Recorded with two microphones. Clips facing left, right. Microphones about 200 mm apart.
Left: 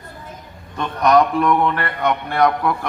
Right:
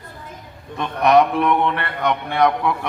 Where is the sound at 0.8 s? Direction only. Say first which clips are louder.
Even; centre (ahead or behind).